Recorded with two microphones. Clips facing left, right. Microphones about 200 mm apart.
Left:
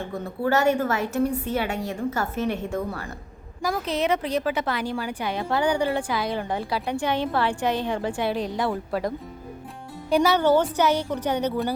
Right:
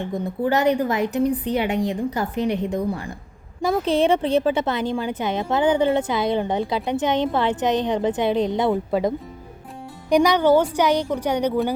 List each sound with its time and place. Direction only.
0.0 s a woman's voice: 15° right (ahead or behind)
3.6 s a woman's voice: 25° right (ahead or behind)